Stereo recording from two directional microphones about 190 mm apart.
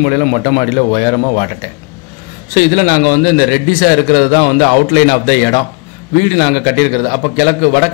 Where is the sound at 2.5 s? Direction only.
45° left (ahead or behind).